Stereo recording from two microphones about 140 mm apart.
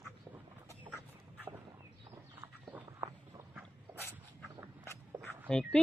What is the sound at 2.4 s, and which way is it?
Walk, 10° right (ahead or behind).